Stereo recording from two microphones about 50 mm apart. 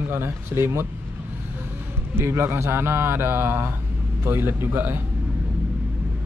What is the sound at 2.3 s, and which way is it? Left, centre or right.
A man's voice, right.